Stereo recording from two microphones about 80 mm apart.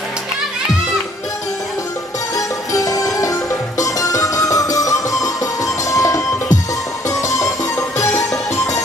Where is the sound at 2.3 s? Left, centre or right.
Left.